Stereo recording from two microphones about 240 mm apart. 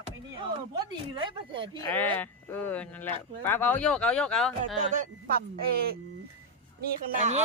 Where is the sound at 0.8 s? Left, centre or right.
Centre.